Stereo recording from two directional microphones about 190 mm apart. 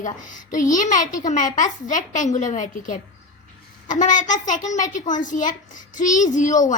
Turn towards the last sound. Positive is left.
turn(degrees=40)  # may be behind; listen again after turning